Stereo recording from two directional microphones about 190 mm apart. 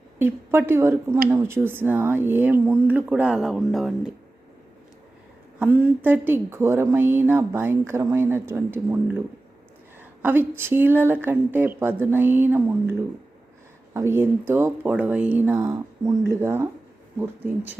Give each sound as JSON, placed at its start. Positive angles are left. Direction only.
{"t": 0.2, "sound": "speech", "side_deg": -10}
{"t": 5.5, "sound": "speech", "side_deg": -10}